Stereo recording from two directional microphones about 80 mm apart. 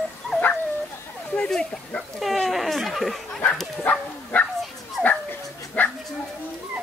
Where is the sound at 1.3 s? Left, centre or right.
Centre.